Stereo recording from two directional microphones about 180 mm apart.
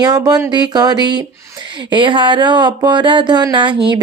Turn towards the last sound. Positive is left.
turn(degrees=-25)  # may be behind; listen again after turning